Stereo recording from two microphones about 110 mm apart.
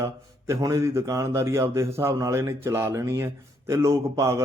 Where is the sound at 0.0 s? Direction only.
25° right (ahead or behind).